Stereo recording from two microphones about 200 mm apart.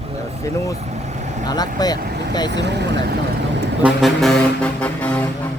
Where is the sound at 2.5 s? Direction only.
60° right (ahead or behind).